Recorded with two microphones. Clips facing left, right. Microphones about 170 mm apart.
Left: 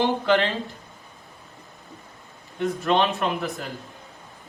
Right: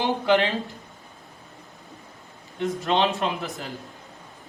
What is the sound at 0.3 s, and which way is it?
Speech, 15° right (ahead or behind).